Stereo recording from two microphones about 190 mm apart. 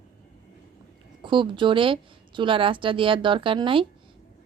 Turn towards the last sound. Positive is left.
turn(degrees=-25)  # may be behind; listen again after turning